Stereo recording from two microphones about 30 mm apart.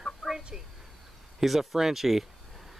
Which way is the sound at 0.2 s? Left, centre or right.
Centre.